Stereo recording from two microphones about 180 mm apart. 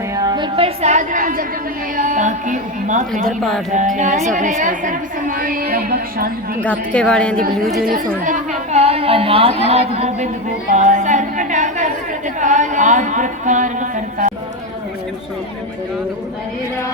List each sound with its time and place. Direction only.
0.2 s a woman's voice: 25° right (ahead or behind); by 3.0 s 45° right (ahead or behind)
3.1 s speech: centre (ahead or behind)
3.7 s a woman's voice: 45° right (ahead or behind)
6.6 s speech: 5° left (ahead or behind)
7.3 s a woman's voice: 55° right (ahead or behind)
8.2 s a sound: 40° right (ahead or behind)
9.6 s a woman's voice: 35° right (ahead or behind)